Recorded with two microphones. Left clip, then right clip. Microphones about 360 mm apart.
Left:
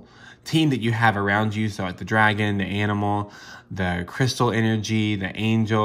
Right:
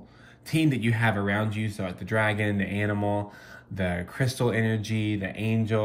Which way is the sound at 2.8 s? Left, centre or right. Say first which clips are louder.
Left 3 dB; left.